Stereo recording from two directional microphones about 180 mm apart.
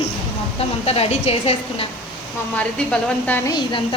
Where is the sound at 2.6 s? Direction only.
5° left (ahead or behind).